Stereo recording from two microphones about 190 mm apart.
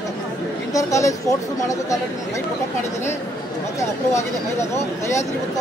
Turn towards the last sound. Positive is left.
turn(degrees=15)  # may be behind; listen again after turning